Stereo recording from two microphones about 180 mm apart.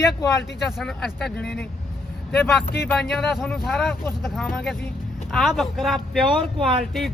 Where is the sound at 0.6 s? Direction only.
Centre (ahead or behind).